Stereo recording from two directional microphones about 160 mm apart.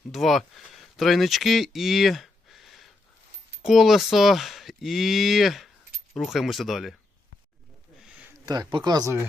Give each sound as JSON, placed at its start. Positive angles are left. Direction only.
{"t": 0.1, "sound": "speech", "side_deg": 0}
{"t": 8.4, "sound": "speech", "side_deg": -25}